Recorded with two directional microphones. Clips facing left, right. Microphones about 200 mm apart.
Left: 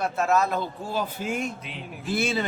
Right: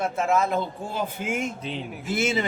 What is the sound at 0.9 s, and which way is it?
Speech, 20° right (ahead or behind).